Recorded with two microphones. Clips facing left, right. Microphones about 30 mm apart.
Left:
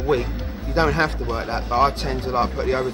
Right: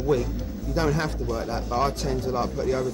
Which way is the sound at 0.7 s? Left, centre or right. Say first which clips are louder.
Left 6 dB; left.